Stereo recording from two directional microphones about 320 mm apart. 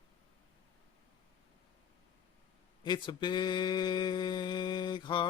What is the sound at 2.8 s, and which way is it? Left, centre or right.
Speech, centre.